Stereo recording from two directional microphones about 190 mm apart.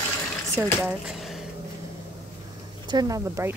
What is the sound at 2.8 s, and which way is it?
Speech, 20° right (ahead or behind).